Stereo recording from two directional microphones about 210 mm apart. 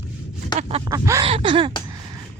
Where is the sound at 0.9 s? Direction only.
15° right (ahead or behind).